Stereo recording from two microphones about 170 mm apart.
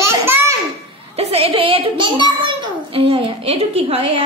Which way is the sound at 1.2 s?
35° right (ahead or behind).